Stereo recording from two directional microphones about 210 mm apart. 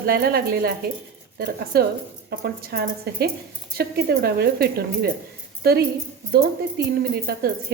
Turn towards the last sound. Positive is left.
turn(degrees=-45)  # may be behind; listen again after turning